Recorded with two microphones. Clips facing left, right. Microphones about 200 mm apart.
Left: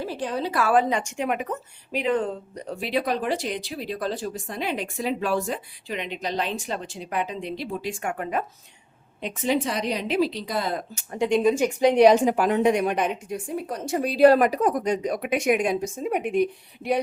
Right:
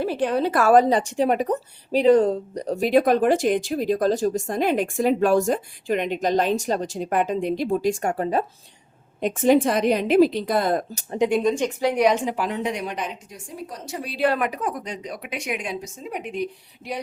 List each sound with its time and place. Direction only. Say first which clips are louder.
0.0 s a woman's voice: right 6 dB; 60° right (ahead or behind); by 8.4 s 35° right (ahead or behind)
9.2 s a woman's voice: right 7 dB; 50° right (ahead or behind)
11.4 s a woman's voice: left 1 dB; 5° left (ahead or behind)
11.8 s a woman's voice: left 6 dB; 20° left (ahead or behind)
12.0 s a woman's voice: left 4 dB; 40° left (ahead or behind); by 17.0 s 55° left (ahead or behind)